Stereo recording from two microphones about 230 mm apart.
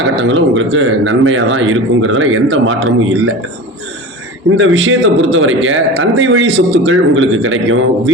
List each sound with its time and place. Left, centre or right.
0.2 s a man's voice: right
4.5 s a man's voice: right